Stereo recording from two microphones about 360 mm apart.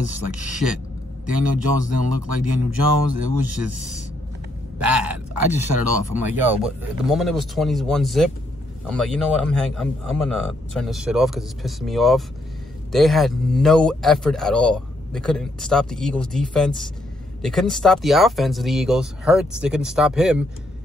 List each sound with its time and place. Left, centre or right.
1.3 s speech: right
4.7 s a sound: centre
5.9 s speech: right
6.3 s a man's voice: centre